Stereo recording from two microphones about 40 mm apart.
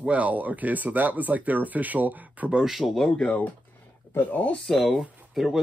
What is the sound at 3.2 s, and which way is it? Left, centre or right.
Speech, left.